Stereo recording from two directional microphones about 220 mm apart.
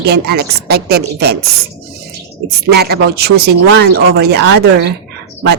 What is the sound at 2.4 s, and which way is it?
Speech, 45° right (ahead or behind).